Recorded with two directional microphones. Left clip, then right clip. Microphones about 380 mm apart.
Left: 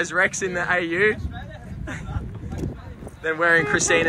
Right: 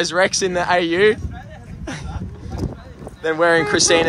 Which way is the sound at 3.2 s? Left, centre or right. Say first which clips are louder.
Right 3 dB; centre.